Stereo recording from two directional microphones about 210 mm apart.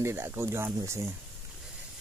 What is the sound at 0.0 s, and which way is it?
Speech, 10° right (ahead or behind).